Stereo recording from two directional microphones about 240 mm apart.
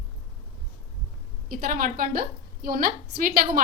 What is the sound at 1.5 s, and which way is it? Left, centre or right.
A woman's voice, right.